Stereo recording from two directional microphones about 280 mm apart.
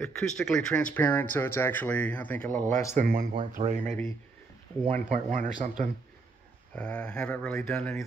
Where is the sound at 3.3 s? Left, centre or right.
Right.